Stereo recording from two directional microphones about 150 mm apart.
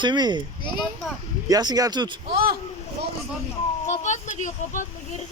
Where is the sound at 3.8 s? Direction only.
55° left (ahead or behind).